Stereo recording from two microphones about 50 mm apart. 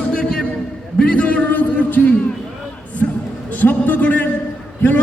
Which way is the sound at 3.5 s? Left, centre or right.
Left.